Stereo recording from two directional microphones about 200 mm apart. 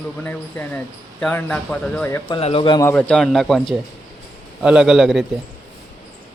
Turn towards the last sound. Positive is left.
turn(degrees=0)  # may be behind; listen again after turning